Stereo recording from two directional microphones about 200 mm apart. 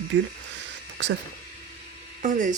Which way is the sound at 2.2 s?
40° right (ahead or behind).